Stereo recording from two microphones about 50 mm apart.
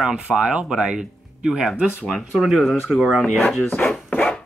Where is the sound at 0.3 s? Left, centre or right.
Right.